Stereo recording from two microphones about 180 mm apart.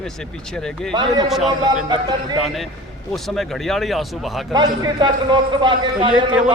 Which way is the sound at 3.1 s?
Centre (ahead or behind).